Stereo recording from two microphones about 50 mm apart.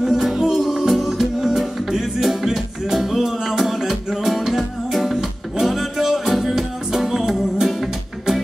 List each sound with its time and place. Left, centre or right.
0.0 s music: centre